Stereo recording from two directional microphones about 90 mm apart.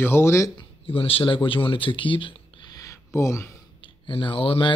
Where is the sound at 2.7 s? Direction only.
35° left (ahead or behind).